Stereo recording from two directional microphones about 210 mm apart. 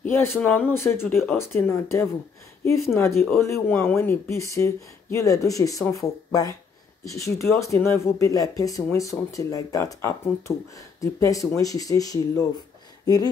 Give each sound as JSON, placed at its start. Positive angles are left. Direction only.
{"t": 0.0, "sound": "speech", "side_deg": 10}